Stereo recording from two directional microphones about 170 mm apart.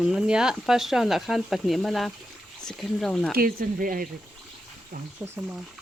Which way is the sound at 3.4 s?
55° right (ahead or behind).